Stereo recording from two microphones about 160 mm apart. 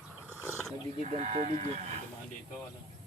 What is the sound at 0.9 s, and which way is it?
Speech, 45° right (ahead or behind).